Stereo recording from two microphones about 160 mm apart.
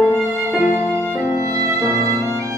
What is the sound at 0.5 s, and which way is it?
Music, 10° right (ahead or behind).